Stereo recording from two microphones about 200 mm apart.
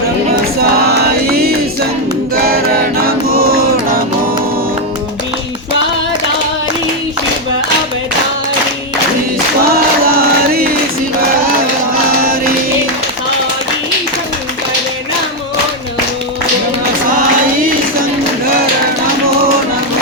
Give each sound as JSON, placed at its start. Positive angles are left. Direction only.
{"t": 0.6, "sound": "chant", "side_deg": -50}
{"t": 2.3, "sound": "a capella", "side_deg": -50}
{"t": 3.3, "sound": "music", "side_deg": -50}
{"t": 9.6, "sound": "a sound", "side_deg": -50}